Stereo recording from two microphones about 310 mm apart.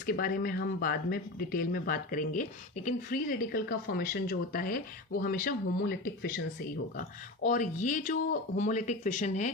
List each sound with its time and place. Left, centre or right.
0.0 s speech: left
7.4 s speech: left